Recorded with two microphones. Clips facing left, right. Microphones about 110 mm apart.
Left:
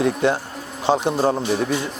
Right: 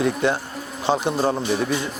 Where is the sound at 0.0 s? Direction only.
35° left (ahead or behind).